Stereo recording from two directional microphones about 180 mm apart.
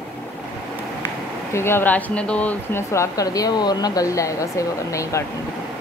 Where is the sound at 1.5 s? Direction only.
15° left (ahead or behind).